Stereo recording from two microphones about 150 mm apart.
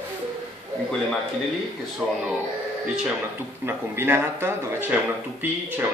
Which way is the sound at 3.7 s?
15° right (ahead or behind).